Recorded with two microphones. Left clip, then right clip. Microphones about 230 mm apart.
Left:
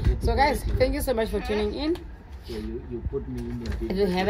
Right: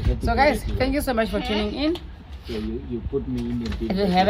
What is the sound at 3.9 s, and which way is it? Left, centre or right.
Speech, centre.